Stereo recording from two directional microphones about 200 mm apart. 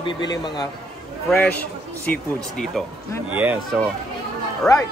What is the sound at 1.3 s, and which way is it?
Speech, 5° left (ahead or behind).